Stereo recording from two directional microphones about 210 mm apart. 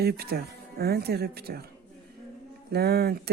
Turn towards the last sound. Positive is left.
turn(degrees=-50)  # may be behind; listen again after turning